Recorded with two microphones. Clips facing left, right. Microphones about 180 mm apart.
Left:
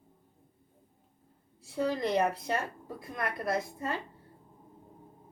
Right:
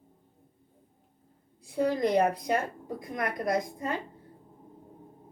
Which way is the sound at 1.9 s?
15° right (ahead or behind).